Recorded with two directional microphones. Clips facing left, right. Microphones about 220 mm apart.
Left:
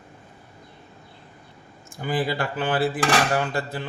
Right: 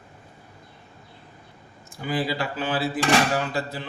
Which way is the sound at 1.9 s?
50° left (ahead or behind).